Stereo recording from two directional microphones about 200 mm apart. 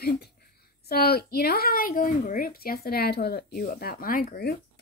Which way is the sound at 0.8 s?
50° left (ahead or behind).